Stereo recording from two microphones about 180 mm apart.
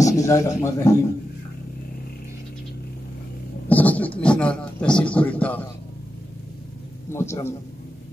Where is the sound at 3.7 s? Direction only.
10° left (ahead or behind).